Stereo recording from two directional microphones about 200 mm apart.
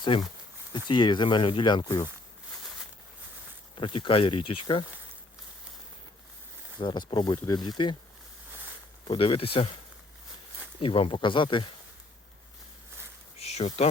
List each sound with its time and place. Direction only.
0.7 s speech: 20° left (ahead or behind)
3.8 s speech: 25° left (ahead or behind)
6.7 s speech: 20° left (ahead or behind)
9.0 s speech: 25° left (ahead or behind)
10.8 s speech: 30° left (ahead or behind)
13.4 s a sound: 30° left (ahead or behind)